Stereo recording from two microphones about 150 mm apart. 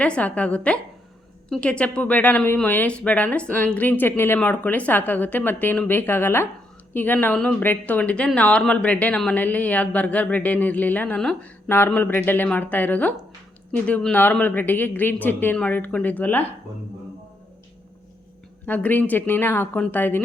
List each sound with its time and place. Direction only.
0.0 s speech: 10° left (ahead or behind)
18.6 s speech: 10° left (ahead or behind)